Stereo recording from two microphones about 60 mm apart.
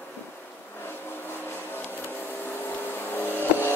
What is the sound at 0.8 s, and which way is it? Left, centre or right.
Vehicle, left.